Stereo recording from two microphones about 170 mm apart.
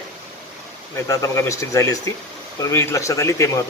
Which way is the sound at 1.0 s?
20° left (ahead or behind).